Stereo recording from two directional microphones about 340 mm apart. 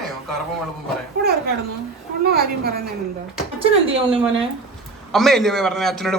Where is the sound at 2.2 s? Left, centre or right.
Right.